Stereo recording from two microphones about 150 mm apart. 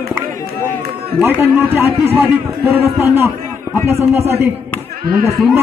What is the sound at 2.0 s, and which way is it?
A man's voice, 15° right (ahead or behind).